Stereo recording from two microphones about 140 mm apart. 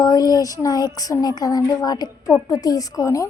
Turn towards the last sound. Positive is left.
turn(degrees=25)  # may be behind; listen again after turning